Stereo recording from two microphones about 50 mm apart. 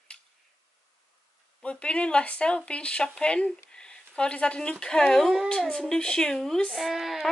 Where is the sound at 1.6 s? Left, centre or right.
Left.